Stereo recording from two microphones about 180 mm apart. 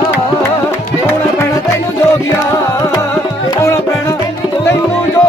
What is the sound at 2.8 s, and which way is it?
Music, 15° left (ahead or behind).